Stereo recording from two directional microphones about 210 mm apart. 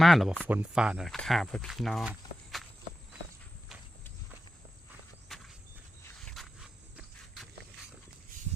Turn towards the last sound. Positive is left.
turn(degrees=5)  # may be behind; listen again after turning